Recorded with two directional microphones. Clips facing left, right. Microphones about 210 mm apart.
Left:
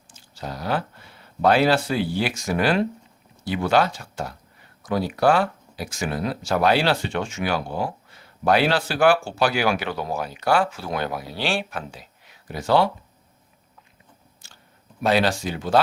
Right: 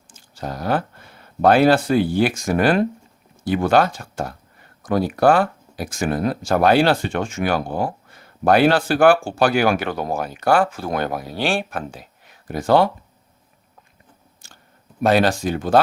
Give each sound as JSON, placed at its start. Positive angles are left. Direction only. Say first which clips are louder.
{"t": 0.1, "sound": "speech", "louder": "right 4 dB", "side_deg": -50}
{"t": 14.4, "sound": "clicking", "louder": "right 5 dB", "side_deg": -50}
{"t": 15.0, "sound": "speech", "louder": "right 4 dB", "side_deg": -50}